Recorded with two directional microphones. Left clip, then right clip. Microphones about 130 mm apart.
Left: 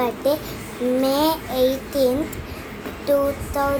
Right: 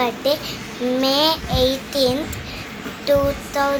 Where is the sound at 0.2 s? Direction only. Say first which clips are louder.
Right 1 dB; 25° left (ahead or behind).